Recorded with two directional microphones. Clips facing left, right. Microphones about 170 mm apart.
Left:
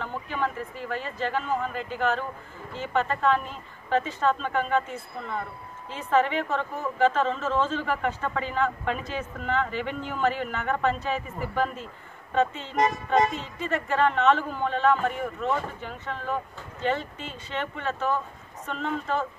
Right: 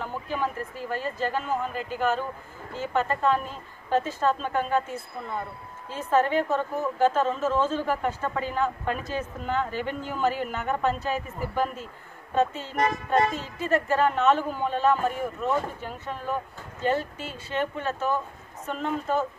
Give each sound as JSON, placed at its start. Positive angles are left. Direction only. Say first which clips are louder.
{"t": 0.0, "sound": "a woman's voice", "louder": "even", "side_deg": -5}
{"t": 12.7, "sound": "speech", "louder": "left 1 dB", "side_deg": 20}
{"t": 13.6, "sound": "a woman's voice", "louder": "right 2 dB", "side_deg": -5}